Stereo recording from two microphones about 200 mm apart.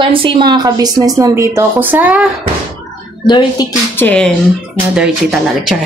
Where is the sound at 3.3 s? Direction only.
20° left (ahead or behind).